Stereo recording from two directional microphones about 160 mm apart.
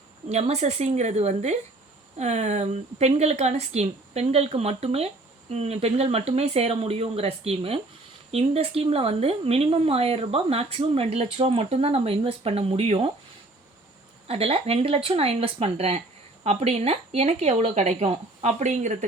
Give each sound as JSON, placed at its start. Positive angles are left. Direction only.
{"t": 0.3, "sound": "a woman's voice", "side_deg": -40}
{"t": 14.3, "sound": "speech", "side_deg": -40}